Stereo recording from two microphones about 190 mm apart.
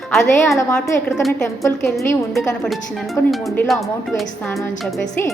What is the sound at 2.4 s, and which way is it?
Speech, centre (ahead or behind).